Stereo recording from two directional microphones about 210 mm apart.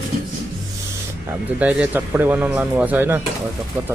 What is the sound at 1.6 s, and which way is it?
Speech, 5° right (ahead or behind).